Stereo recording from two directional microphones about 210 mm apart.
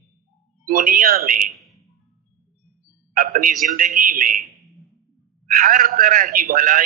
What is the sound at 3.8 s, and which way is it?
Speech, 40° right (ahead or behind).